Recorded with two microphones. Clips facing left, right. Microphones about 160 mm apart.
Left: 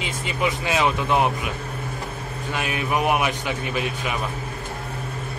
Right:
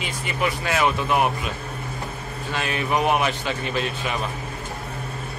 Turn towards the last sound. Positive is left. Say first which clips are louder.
# even
turn(degrees=15)  # may be behind; listen again after turning